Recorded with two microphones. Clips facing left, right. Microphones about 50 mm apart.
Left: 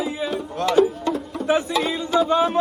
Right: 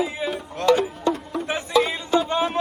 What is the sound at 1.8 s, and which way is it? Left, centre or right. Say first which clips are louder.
Music: left 2 dB; right.